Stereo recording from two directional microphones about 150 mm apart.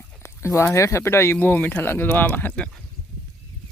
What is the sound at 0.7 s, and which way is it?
Speech, 20° left (ahead or behind).